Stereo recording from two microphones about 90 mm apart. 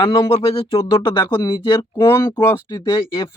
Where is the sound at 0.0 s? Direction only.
55° left (ahead or behind).